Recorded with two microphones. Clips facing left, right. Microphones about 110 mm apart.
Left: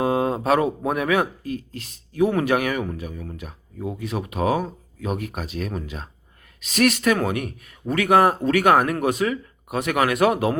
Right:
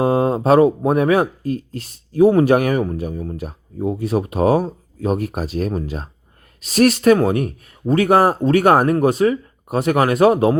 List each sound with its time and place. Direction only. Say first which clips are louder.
0.0 s speech: right 5 dB; 35° right (ahead or behind)